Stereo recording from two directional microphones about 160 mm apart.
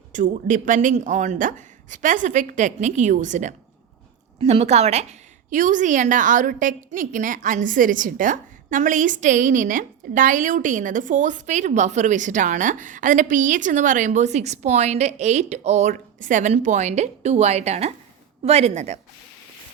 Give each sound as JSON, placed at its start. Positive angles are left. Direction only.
{"t": 0.1, "sound": "a woman's voice", "side_deg": -55}
{"t": 5.5, "sound": "a woman's voice", "side_deg": -55}